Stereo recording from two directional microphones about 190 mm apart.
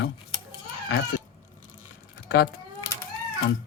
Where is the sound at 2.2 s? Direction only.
60° left (ahead or behind).